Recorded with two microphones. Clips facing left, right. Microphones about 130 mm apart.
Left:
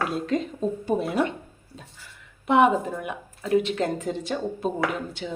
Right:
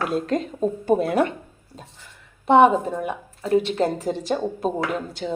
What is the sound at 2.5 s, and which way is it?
A woman's voice, 30° right (ahead or behind).